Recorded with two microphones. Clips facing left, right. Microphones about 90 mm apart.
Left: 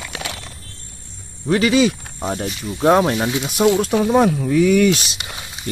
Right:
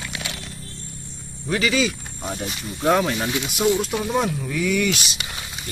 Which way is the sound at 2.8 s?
30° left (ahead or behind).